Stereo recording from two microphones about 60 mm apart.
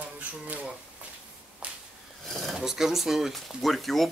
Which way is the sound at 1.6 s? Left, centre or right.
Centre.